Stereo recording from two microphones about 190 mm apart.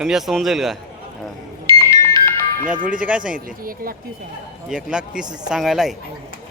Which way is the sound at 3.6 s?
50° right (ahead or behind).